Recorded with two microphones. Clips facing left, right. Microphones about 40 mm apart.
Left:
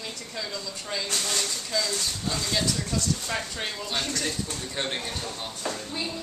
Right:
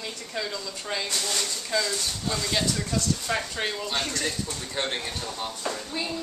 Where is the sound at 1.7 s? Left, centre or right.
Right.